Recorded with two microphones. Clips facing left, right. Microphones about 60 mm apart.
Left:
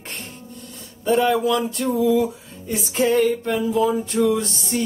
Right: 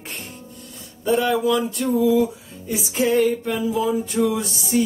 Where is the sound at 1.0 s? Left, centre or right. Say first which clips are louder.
Left 1 dB; centre.